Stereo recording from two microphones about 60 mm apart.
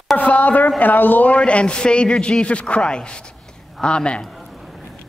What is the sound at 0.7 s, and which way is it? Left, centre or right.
A man's voice, left.